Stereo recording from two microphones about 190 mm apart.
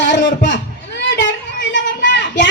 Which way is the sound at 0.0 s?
70° left (ahead or behind).